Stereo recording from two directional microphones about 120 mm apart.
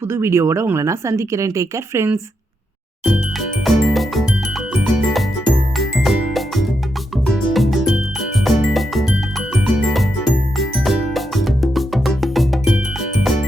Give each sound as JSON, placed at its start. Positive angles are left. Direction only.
{"t": 0.1, "sound": "speech", "side_deg": -20}
{"t": 3.0, "sound": "jingle", "side_deg": 0}
{"t": 4.7, "sound": "music", "side_deg": 0}